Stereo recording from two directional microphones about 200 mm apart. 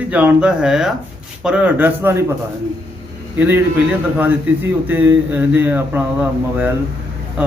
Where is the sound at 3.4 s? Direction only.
10° right (ahead or behind).